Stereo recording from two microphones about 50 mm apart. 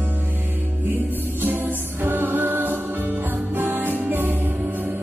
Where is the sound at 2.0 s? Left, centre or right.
Right.